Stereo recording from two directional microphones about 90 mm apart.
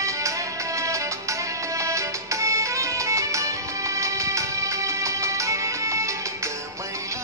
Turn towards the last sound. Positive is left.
turn(degrees=-35)  # may be behind; listen again after turning